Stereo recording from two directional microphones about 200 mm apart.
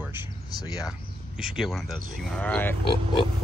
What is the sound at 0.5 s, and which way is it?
Speech, 20° left (ahead or behind).